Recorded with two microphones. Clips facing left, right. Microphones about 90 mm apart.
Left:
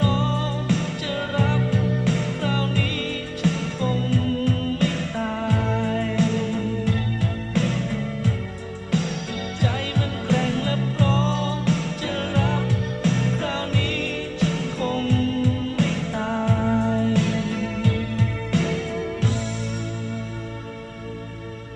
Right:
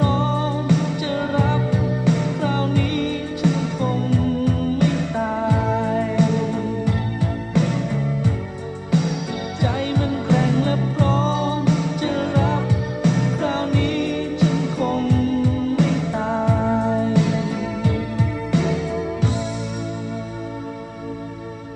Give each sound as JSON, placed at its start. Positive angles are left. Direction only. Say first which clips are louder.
{"t": 0.0, "sound": "music", "louder": "right 3 dB", "side_deg": -5}